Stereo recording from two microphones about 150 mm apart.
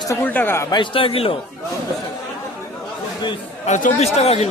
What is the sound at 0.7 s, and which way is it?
Speech, 35° left (ahead or behind).